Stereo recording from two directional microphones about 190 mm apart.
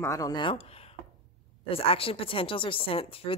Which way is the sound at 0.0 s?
15° left (ahead or behind).